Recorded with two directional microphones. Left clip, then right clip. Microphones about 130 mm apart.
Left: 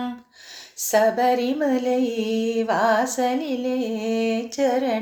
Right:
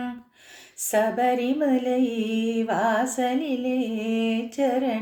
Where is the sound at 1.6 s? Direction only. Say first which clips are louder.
Left 2 dB; 20° right (ahead or behind).